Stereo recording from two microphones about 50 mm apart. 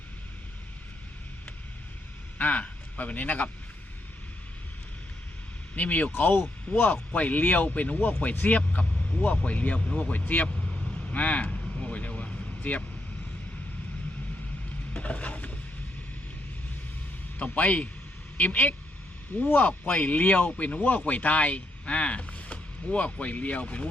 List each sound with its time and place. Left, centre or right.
2.4 s speech: left
5.7 s speech: left
11.1 s vehicle: left
14.9 s a sound: left
17.3 s speech: left